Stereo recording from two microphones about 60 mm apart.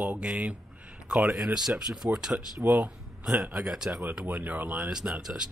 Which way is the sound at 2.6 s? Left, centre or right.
Right.